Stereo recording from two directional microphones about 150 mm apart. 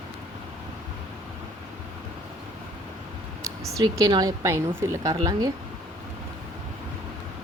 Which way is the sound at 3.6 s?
20° right (ahead or behind).